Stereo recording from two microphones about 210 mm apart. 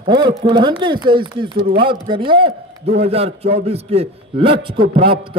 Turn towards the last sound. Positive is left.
turn(degrees=-25)  # may be behind; listen again after turning